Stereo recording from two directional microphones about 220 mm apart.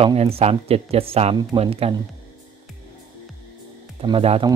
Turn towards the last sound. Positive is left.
turn(degrees=-25)  # may be behind; listen again after turning